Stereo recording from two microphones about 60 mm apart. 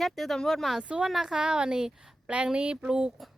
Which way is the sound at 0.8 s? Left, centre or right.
Right.